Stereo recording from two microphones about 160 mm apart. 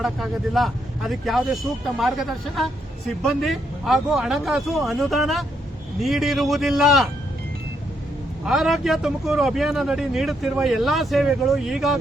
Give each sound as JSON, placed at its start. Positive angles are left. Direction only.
{"t": 0.0, "sound": "speech", "side_deg": 0}
{"t": 8.4, "sound": "speech", "side_deg": 0}